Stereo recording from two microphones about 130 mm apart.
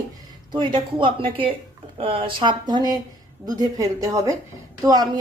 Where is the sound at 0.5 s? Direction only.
40° right (ahead or behind).